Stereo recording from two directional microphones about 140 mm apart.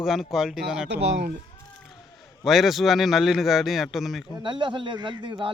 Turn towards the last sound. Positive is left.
turn(degrees=-35)  # may be behind; listen again after turning